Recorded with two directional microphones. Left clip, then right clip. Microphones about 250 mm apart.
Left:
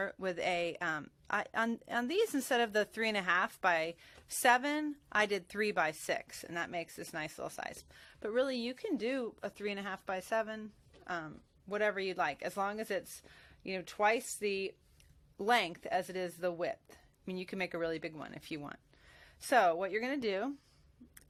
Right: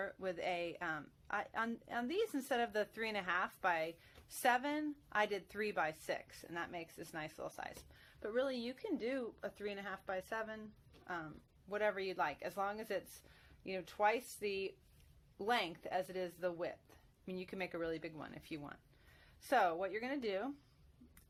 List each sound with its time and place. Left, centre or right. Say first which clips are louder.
0.0 s speech: left 5 dB; left